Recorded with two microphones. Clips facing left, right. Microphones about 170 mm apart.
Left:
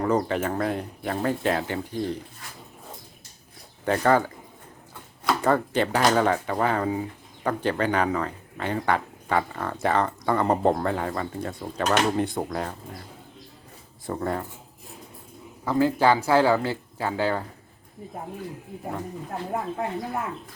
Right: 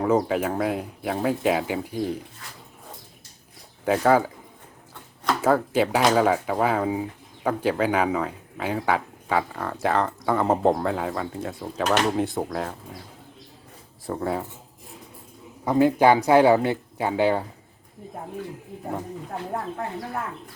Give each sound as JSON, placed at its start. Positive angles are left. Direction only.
{"t": 0.0, "sound": "speech", "side_deg": -5}
{"t": 3.8, "sound": "speech", "side_deg": -5}
{"t": 5.4, "sound": "speech", "side_deg": -5}
{"t": 14.1, "sound": "speech", "side_deg": -5}
{"t": 15.6, "sound": "speech", "side_deg": -20}
{"t": 19.3, "sound": "speech", "side_deg": 10}